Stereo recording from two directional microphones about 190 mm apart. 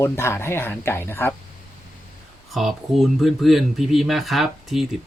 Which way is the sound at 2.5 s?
Centre (ahead or behind).